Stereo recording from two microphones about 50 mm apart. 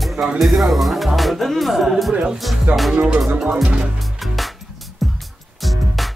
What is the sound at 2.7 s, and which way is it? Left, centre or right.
Music, right.